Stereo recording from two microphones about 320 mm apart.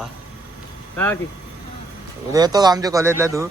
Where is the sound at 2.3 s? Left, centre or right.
Centre.